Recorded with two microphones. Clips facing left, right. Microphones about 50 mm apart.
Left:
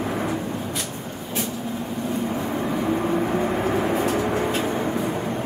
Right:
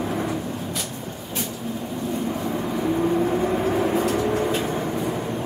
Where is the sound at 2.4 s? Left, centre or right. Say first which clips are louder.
Even; centre.